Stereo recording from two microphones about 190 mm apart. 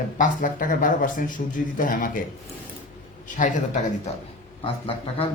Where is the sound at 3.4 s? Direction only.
40° left (ahead or behind).